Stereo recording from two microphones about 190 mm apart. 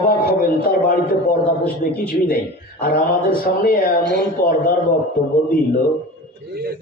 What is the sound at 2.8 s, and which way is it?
Speech, 50° left (ahead or behind).